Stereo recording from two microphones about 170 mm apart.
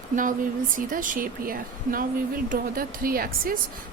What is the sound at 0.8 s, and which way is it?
Speech, 50° right (ahead or behind).